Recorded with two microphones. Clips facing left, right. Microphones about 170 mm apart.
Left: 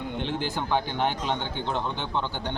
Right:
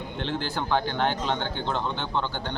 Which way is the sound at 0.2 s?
10° left (ahead or behind).